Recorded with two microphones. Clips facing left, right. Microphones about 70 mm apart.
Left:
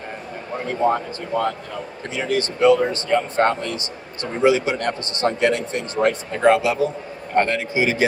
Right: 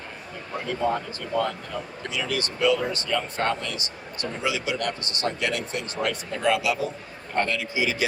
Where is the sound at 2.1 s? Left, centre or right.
Left.